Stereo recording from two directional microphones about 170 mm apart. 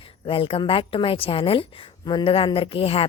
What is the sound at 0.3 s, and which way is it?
A woman's voice, 30° left (ahead or behind).